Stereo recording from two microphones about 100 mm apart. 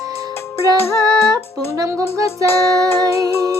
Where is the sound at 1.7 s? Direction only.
30° right (ahead or behind).